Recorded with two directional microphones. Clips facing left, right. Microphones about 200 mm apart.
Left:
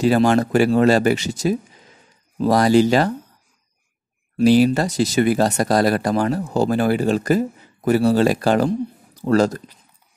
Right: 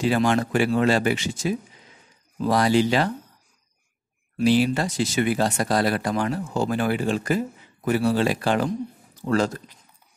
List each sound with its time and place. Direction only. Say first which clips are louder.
0.0 s speech: left 5 dB; 40° left (ahead or behind)
4.4 s speech: left 5 dB; 40° left (ahead or behind)